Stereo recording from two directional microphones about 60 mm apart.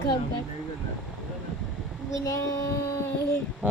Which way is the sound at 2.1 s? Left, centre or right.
Left.